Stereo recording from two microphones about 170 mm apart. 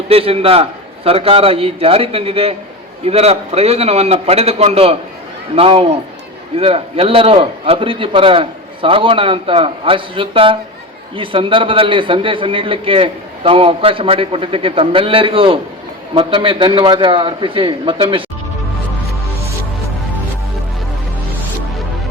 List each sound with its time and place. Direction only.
0.1 s a man's voice: 35° right (ahead or behind)